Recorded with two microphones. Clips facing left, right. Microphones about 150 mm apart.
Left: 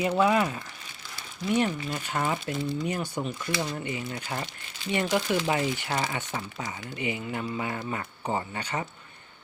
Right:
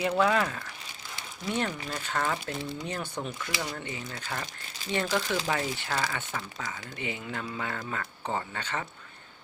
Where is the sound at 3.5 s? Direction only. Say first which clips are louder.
Left 5 dB; 20° left (ahead or behind).